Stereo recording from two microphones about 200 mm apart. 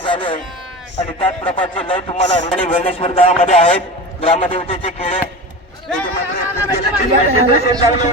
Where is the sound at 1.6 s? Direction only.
25° left (ahead or behind).